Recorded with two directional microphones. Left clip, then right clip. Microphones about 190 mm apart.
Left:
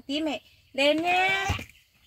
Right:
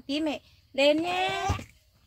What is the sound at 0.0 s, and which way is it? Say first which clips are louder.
Speech: left 1 dB; 25° left (ahead or behind).